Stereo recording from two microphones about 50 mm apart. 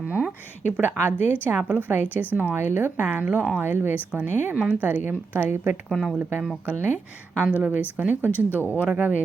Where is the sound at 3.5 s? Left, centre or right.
Right.